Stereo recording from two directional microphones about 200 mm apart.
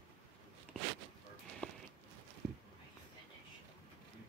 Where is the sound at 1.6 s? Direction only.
5° left (ahead or behind).